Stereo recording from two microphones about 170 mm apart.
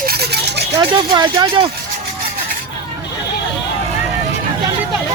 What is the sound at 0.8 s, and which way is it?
Speech, 25° right (ahead or behind).